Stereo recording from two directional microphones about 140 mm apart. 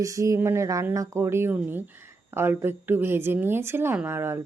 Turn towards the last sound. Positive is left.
turn(degrees=-15)  # may be behind; listen again after turning